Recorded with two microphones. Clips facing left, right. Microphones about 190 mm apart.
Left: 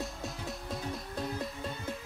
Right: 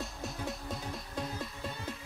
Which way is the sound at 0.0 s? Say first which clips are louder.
Even; centre (ahead or behind).